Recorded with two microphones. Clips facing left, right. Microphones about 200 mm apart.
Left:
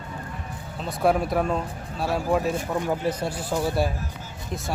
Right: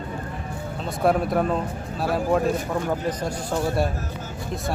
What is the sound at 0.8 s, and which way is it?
Speech, centre (ahead or behind).